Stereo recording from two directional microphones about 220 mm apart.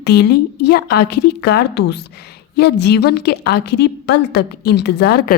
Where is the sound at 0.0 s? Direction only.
50° left (ahead or behind).